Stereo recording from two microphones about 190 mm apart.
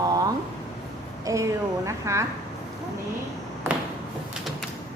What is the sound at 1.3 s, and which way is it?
Speech, 15° right (ahead or behind).